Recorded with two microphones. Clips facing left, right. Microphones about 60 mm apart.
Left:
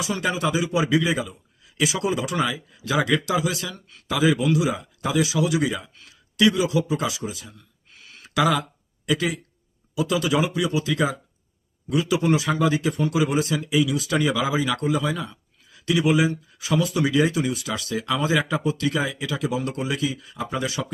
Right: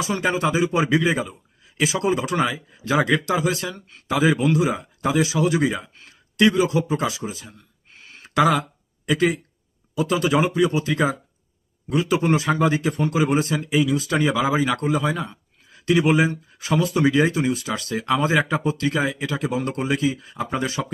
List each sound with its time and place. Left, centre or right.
0.0 s speech: right